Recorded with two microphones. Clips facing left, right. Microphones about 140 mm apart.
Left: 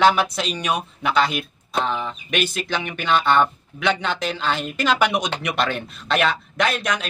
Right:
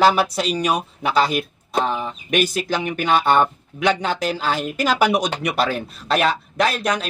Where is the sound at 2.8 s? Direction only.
40° right (ahead or behind).